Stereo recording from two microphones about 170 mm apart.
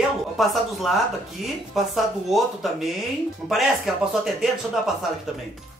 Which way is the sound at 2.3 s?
Centre (ahead or behind).